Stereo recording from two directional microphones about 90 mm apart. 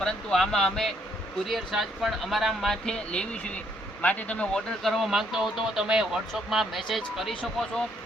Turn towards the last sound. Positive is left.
turn(degrees=5)  # may be behind; listen again after turning